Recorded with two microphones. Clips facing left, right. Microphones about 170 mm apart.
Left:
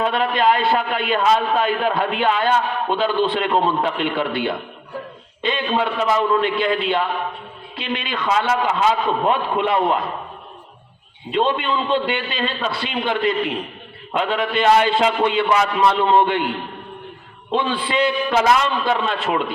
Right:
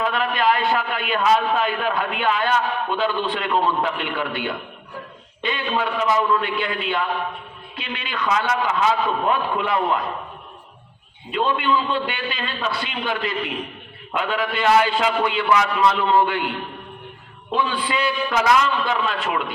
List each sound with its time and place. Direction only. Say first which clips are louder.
0.0 s a man's voice: left 3 dB; 30° left (ahead or behind)
11.3 s a man's voice: left 1 dB; 30° left (ahead or behind)
17.5 s a man's voice: left 2 dB; 25° left (ahead or behind)